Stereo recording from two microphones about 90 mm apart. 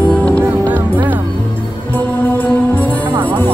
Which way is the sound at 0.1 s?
10° left (ahead or behind).